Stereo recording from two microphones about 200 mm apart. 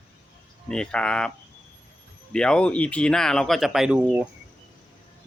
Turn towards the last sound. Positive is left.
turn(degrees=-5)  # may be behind; listen again after turning